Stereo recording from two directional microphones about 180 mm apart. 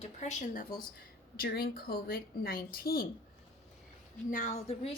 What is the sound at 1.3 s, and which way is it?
Speech, 60° left (ahead or behind).